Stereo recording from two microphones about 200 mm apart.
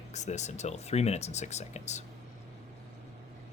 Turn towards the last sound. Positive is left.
turn(degrees=35)  # may be behind; listen again after turning